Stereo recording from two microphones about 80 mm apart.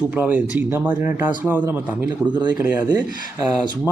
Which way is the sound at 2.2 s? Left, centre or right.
Right.